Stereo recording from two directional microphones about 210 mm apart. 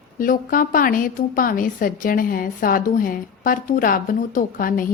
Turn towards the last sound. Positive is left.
turn(degrees=40)  # may be behind; listen again after turning